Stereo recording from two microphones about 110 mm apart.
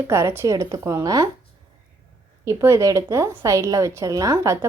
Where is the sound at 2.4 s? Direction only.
30° right (ahead or behind).